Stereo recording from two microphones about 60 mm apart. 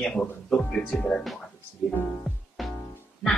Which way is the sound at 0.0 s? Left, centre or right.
Centre.